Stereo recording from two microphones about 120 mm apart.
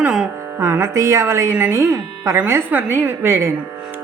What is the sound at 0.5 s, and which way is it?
Speech, 25° right (ahead or behind).